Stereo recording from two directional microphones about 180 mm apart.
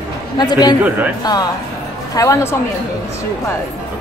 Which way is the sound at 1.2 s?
20° left (ahead or behind).